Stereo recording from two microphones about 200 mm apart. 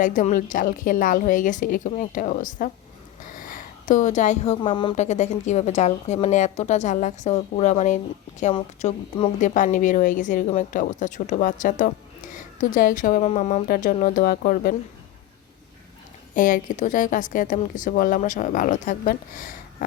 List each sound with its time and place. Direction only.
0.0 s speech: 40° left (ahead or behind)
3.3 s a sound: 45° left (ahead or behind)
4.6 s speech: 25° left (ahead or behind)
8.5 s speech: 25° left (ahead or behind); by 14.8 s 45° left (ahead or behind)
16.3 s speech: 40° left (ahead or behind)